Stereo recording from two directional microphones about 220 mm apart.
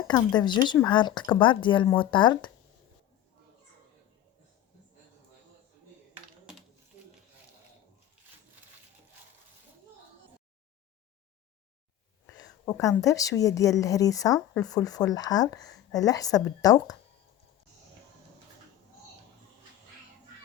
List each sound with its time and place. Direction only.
0.1 s speech: 20° left (ahead or behind)
12.2 s a sound: 15° left (ahead or behind)
13.0 s speech: 15° left (ahead or behind)